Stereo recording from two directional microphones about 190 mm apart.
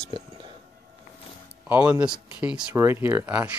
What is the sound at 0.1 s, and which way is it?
Whispering, 25° right (ahead or behind).